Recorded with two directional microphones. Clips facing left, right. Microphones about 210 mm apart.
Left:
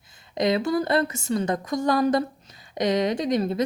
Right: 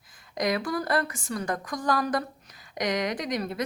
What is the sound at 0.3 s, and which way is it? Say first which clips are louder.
A woman's voice: left 5 dB; 25° left (ahead or behind).